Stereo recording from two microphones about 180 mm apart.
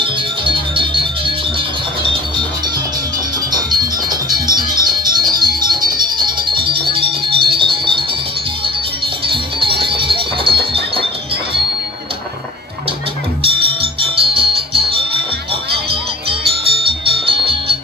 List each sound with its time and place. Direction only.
0.0 s music: 30° right (ahead or behind)
4.1 s music: 25° right (ahead or behind)
9.3 s music: 30° right (ahead or behind)
13.4 s music: 30° right (ahead or behind)
16.5 s music: 30° right (ahead or behind)